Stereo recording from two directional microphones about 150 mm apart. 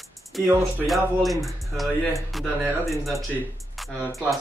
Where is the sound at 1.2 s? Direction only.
Centre (ahead or behind).